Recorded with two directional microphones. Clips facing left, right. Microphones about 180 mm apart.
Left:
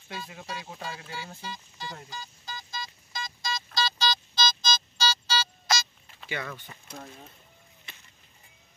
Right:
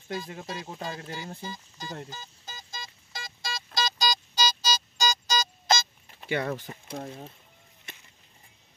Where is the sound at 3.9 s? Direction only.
40° right (ahead or behind).